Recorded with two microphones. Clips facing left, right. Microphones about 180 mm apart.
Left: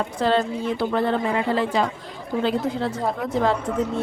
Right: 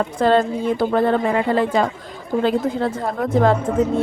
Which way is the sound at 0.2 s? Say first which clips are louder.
Right 5 dB; 50° right (ahead or behind).